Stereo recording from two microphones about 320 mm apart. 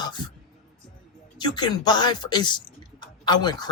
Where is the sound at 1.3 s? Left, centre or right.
Centre.